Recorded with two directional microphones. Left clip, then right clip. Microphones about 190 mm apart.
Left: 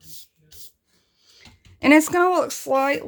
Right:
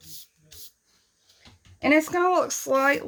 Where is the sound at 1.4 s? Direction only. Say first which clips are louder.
Left 3 dB; 45° left (ahead or behind); by 2.5 s 30° left (ahead or behind).